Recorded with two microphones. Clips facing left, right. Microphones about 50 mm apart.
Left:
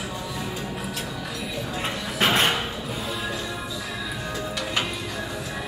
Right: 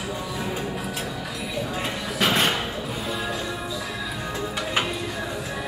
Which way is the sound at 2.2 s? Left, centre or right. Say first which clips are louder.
Left 1 dB; left.